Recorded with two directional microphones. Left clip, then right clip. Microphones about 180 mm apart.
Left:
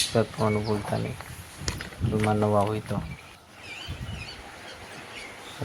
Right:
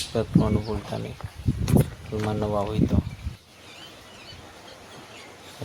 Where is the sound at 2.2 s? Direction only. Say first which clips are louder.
Left 3 dB; 15° left (ahead or behind).